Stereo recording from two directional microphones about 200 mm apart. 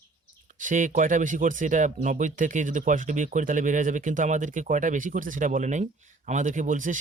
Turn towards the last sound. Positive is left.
turn(degrees=-40)  # may be behind; listen again after turning